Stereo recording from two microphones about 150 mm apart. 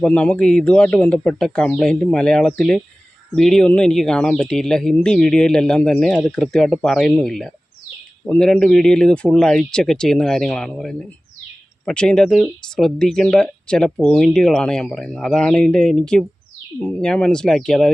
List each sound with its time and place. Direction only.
0.0 s speech: 10° left (ahead or behind)